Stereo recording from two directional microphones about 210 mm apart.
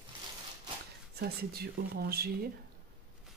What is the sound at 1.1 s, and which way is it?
Speech, 50° right (ahead or behind).